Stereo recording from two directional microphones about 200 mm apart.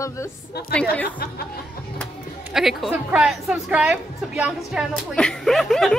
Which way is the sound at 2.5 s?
Centre (ahead or behind).